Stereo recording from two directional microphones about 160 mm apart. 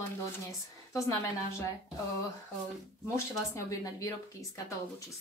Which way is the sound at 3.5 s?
20° left (ahead or behind).